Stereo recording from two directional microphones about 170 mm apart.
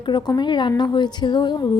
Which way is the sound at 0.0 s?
25° left (ahead or behind).